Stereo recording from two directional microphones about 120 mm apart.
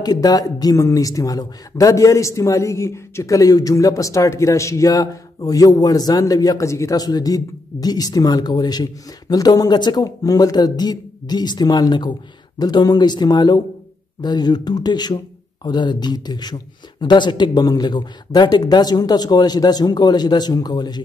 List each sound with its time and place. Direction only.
0.0 s a man's voice: 30° left (ahead or behind)